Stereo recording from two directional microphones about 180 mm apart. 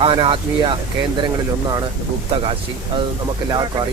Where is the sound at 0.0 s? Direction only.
30° right (ahead or behind).